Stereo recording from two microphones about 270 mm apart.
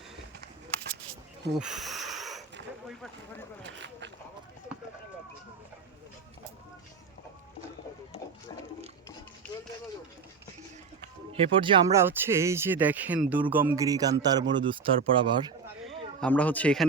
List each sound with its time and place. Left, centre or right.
1.5 s a sound: centre
11.3 s speech: centre
16.2 s speech: centre